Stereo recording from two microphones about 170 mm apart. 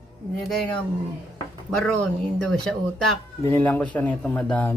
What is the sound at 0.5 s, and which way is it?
Speech, 5° left (ahead or behind).